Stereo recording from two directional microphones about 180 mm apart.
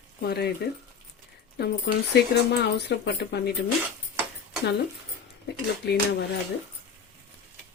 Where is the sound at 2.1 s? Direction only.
65° left (ahead or behind).